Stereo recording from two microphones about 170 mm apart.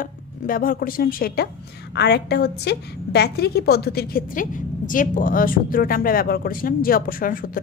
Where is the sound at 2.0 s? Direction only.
75° left (ahead or behind).